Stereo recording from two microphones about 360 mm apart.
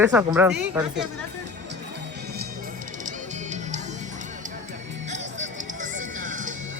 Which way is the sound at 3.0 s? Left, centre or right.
Centre.